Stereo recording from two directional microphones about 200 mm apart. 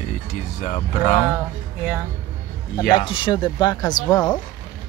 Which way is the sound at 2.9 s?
25° left (ahead or behind).